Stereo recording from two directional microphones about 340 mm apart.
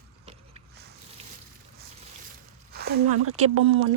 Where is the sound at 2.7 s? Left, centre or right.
Right.